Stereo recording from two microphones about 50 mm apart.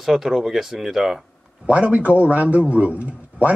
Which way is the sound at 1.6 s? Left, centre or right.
Right.